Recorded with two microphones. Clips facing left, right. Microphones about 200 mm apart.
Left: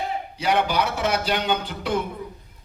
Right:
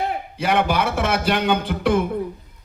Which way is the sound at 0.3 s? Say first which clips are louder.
Right 2 dB; 55° right (ahead or behind).